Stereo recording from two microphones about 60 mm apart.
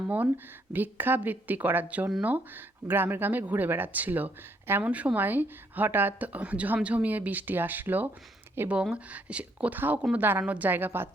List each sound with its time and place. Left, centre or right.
0.7 s speech: right
4.8 s speech: right
8.7 s speech: centre; by 10.4 s right
10.4 s speech: right
10.7 s speech: right